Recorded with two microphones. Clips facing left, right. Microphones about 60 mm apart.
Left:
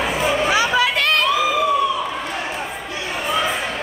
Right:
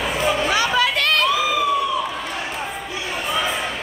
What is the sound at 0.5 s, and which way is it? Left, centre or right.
Chatter, centre.